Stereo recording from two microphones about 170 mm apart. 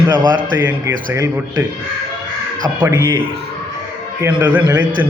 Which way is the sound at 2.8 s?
25° right (ahead or behind).